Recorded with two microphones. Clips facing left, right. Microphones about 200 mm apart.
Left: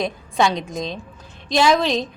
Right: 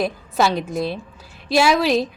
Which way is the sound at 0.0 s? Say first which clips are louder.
Even; 5° right (ahead or behind).